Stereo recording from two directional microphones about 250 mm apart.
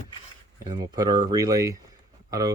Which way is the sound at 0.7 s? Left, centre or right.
Centre.